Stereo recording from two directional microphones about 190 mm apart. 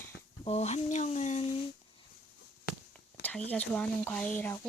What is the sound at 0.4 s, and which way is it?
Speech, 35° left (ahead or behind).